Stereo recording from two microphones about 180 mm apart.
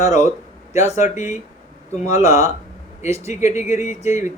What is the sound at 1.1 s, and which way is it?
Speech, 40° left (ahead or behind).